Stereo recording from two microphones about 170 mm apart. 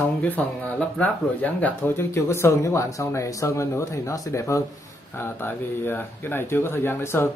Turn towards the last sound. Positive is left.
turn(degrees=15)  # may be behind; listen again after turning